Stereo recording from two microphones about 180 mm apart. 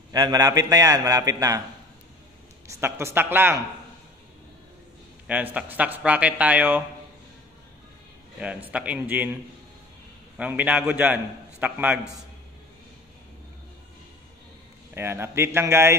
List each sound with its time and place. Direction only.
0.1 s a man's voice: 20° right (ahead or behind)
2.7 s speech: 15° right (ahead or behind)
5.2 s speech: 10° right (ahead or behind)
8.6 s speech: 10° right (ahead or behind)
15.0 s speech: 15° right (ahead or behind)